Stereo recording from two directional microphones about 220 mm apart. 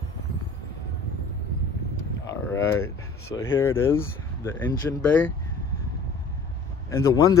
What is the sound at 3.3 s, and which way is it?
Speech, 10° left (ahead or behind).